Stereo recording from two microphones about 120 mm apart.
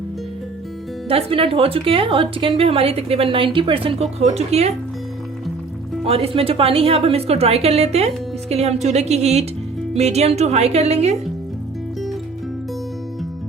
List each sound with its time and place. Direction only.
1.0 s a woman's voice: 50° right (ahead or behind)
6.1 s a woman's voice: 55° right (ahead or behind)